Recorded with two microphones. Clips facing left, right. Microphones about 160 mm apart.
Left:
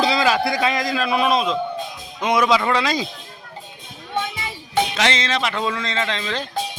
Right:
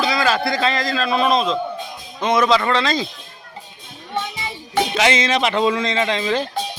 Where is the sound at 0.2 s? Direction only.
15° left (ahead or behind).